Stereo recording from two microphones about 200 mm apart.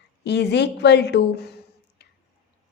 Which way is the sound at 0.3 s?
60° left (ahead or behind).